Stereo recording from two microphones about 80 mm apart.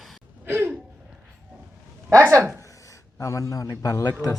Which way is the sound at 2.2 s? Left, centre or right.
Right.